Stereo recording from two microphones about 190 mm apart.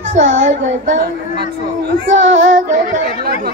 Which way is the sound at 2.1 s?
80° right.